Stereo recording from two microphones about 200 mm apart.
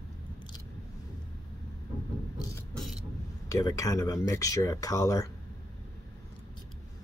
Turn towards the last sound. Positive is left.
turn(degrees=15)  # may be behind; listen again after turning